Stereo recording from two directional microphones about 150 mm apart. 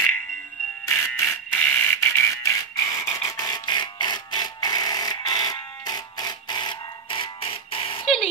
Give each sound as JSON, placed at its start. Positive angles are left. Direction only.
{"t": 0.8, "sound": "fire alarm", "side_deg": 15}